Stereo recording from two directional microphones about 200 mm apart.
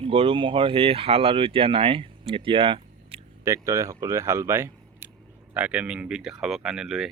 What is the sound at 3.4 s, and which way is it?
Speech, 15° right (ahead or behind).